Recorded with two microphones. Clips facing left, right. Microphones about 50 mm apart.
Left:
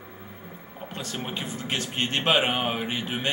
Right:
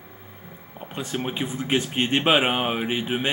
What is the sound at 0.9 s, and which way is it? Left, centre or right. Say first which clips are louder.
Speech: right 5 dB; centre.